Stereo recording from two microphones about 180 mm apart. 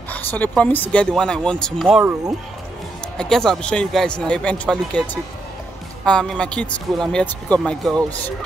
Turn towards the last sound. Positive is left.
turn(degrees=5)  # may be behind; listen again after turning